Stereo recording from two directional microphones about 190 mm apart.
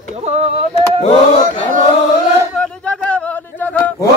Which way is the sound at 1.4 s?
40° right (ahead or behind).